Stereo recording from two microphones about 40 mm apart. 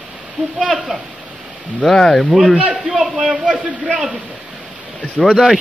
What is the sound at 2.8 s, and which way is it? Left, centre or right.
Speech, centre.